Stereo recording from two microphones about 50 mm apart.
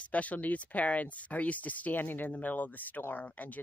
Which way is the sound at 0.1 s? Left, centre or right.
Left.